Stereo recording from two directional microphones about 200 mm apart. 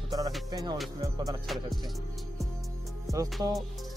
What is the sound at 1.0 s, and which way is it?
Speech, 15° right (ahead or behind).